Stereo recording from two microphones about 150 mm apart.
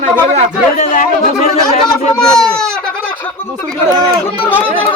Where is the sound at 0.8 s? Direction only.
55° left (ahead or behind).